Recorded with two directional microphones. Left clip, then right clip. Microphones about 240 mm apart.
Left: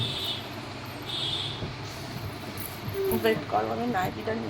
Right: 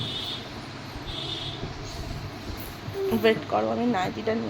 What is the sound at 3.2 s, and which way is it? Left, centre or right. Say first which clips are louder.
Speech: right 4 dB; right.